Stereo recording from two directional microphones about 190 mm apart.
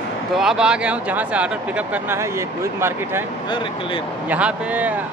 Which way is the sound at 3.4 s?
25° left (ahead or behind).